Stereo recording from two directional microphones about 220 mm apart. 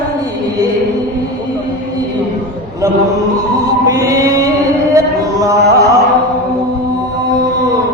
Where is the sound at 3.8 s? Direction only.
15° right (ahead or behind).